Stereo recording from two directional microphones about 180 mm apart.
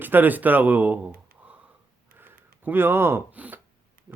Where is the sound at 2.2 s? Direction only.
10° right (ahead or behind).